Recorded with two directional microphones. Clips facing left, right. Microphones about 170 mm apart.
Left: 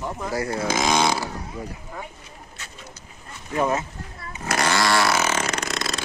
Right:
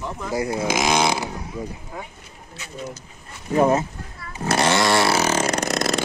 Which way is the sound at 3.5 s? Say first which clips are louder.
Right 5 dB; 30° right (ahead or behind).